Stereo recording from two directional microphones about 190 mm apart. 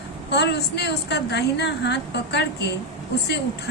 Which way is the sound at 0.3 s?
60° left (ahead or behind).